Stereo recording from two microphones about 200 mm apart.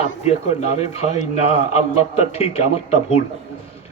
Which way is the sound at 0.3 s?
30° left (ahead or behind).